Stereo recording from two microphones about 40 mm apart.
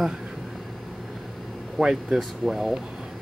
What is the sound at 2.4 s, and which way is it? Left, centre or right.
Speech, centre.